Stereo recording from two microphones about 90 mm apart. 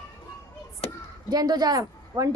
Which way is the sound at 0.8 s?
90° left.